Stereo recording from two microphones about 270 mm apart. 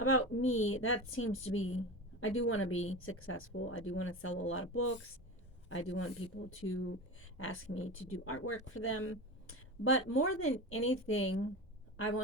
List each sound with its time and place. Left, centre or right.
0.0 s speech: left